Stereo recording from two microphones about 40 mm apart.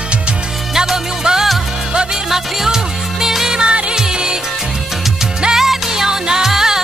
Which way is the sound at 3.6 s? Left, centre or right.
Right.